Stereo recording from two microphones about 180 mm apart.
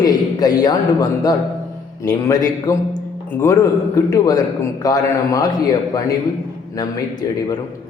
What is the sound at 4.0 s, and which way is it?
A man's voice, 20° left (ahead or behind).